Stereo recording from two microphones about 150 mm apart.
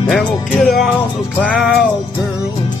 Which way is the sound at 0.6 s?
Centre (ahead or behind).